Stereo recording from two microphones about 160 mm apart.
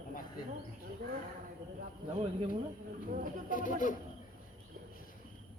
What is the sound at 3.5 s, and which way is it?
Speech, 55° left (ahead or behind).